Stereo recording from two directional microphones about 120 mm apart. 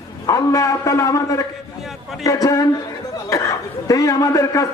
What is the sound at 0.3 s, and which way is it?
A man's voice, 25° left (ahead or behind).